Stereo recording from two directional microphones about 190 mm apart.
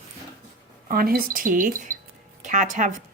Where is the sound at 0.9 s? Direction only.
50° right (ahead or behind).